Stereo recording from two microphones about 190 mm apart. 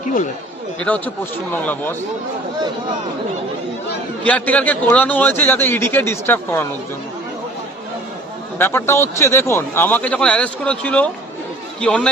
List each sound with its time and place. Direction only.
0.0 s speech: 40° left (ahead or behind)
0.8 s a man's voice: 5° left (ahead or behind)
4.2 s a man's voice: 5° left (ahead or behind)
8.5 s a man's voice: 10° left (ahead or behind)